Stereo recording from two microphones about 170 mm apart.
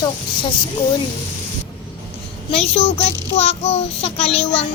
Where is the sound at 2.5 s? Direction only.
35° left (ahead or behind).